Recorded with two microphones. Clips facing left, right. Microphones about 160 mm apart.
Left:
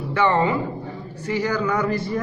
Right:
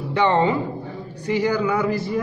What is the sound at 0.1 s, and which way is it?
A man's voice, 20° right (ahead or behind).